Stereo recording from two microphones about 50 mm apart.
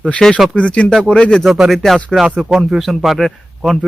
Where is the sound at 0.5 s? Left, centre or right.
Left.